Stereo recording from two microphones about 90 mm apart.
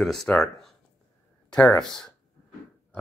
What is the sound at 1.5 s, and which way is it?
Speech, 15° left (ahead or behind).